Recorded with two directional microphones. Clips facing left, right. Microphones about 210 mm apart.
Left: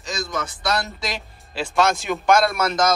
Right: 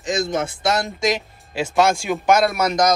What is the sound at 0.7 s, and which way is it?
Speech, 45° right (ahead or behind).